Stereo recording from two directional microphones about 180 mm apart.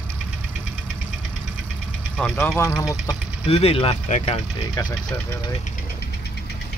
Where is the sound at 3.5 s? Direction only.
35° left (ahead or behind).